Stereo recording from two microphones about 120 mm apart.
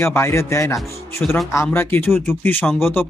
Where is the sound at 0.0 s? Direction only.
20° left (ahead or behind).